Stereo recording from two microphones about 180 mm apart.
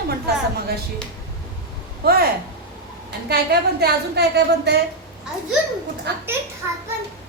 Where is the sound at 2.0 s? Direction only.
60° right (ahead or behind).